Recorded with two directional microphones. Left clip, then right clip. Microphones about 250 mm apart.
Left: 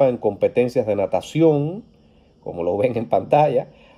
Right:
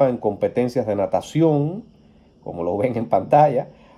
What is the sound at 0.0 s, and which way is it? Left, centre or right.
Speech, left.